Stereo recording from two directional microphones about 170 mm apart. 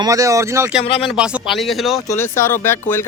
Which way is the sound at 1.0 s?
5° right (ahead or behind).